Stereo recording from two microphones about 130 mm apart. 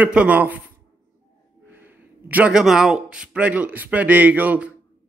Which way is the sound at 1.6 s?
15° right (ahead or behind).